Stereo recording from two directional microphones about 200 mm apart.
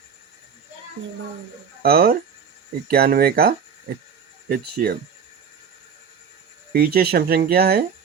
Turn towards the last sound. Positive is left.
turn(degrees=-50)  # may be behind; listen again after turning